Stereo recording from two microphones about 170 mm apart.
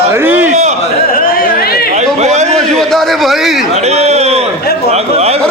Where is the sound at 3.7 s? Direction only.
40° right (ahead or behind).